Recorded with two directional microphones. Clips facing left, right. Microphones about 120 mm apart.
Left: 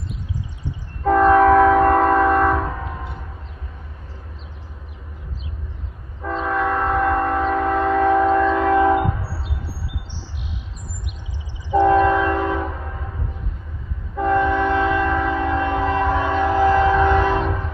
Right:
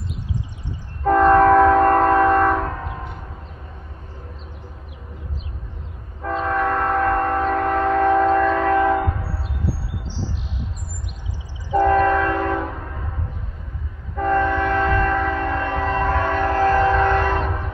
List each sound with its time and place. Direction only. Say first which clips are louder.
1.0 s train: even; centre (ahead or behind)
6.2 s train: even; centre (ahead or behind)
11.7 s train: left 1 dB; 10° left (ahead or behind)
14.1 s train: left 1 dB; 10° left (ahead or behind)